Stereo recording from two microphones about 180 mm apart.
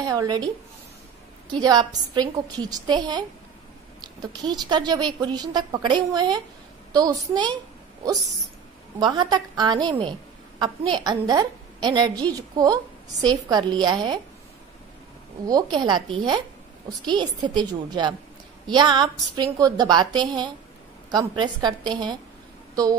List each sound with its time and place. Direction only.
0.0 s a woman's voice: 20° right (ahead or behind)
1.5 s a woman's voice: 20° right (ahead or behind)
15.4 s a woman's voice: 20° right (ahead or behind)